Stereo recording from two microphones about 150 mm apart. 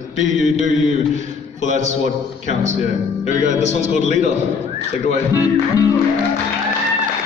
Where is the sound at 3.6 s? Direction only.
50° left (ahead or behind).